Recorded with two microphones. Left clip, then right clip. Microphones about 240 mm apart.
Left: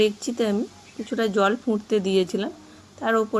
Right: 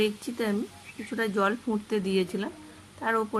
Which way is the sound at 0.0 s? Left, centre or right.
Centre.